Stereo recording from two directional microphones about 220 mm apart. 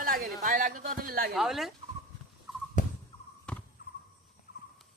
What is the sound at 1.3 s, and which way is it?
Speech, centre (ahead or behind).